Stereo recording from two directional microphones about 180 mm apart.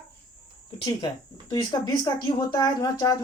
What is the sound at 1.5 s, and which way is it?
Speech, 25° left (ahead or behind).